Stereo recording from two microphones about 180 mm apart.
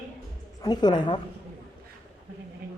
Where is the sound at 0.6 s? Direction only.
20° left (ahead or behind).